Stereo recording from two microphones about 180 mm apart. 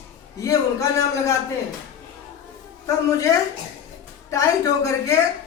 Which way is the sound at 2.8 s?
15° left (ahead or behind).